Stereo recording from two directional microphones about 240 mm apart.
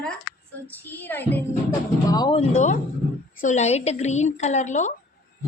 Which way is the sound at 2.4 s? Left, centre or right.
Left.